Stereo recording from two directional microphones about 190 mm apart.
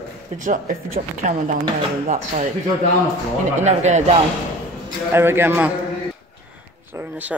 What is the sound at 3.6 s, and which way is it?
Speech, 35° right (ahead or behind).